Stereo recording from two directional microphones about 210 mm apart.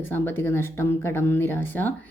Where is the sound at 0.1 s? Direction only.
10° left (ahead or behind).